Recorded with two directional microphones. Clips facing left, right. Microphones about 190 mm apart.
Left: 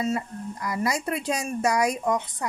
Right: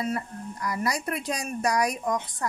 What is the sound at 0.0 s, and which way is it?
Speech, 25° left (ahead or behind).